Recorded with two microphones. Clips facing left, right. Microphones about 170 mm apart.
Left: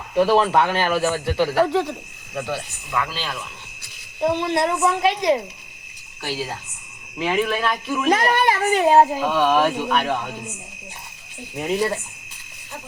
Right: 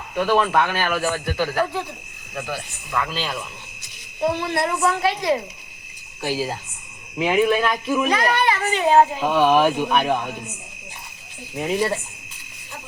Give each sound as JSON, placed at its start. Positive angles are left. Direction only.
{"t": 0.1, "sound": "speech", "side_deg": 30}
{"t": 2.9, "sound": "speech", "side_deg": 0}
{"t": 4.2, "sound": "speech", "side_deg": 20}
{"t": 6.2, "sound": "speech", "side_deg": -20}
{"t": 8.1, "sound": "a child's voice", "side_deg": 50}
{"t": 9.2, "sound": "speech", "side_deg": -10}
{"t": 11.5, "sound": "speech", "side_deg": -5}